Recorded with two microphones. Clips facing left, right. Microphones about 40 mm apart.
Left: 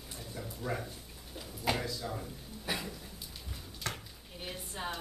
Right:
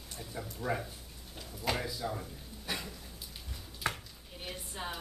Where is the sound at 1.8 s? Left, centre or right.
Centre.